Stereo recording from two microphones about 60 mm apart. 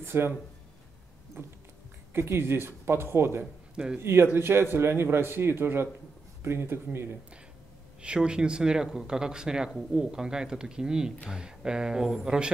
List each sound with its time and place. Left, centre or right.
0.0 s speech: right
1.4 s a man's voice: right
3.7 s speech: centre
4.0 s a man's voice: right
8.0 s speech: centre